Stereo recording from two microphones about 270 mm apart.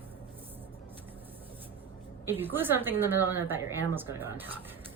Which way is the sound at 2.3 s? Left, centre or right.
Centre.